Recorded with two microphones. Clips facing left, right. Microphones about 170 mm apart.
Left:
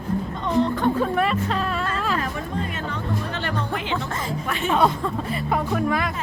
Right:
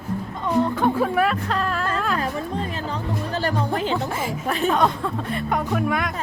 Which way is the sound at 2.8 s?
35° right (ahead or behind).